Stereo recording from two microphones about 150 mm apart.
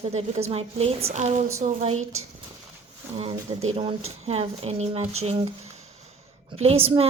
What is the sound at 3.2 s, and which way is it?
A woman's voice, 40° right (ahead or behind).